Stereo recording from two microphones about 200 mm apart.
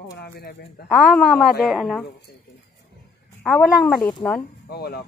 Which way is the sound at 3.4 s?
5° left (ahead or behind).